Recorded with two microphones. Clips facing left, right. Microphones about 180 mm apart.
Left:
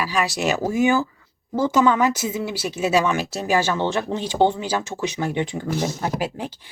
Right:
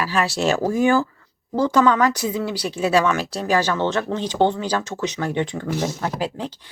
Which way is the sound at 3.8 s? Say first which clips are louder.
Right 1 dB; 10° left (ahead or behind).